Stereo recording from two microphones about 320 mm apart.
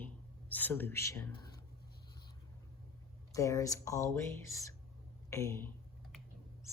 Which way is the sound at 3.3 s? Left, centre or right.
Centre.